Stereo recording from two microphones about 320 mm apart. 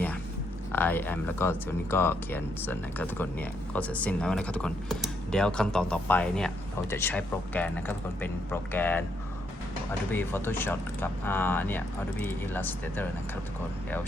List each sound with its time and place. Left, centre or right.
0.7 s speech: centre
10.1 s speech: centre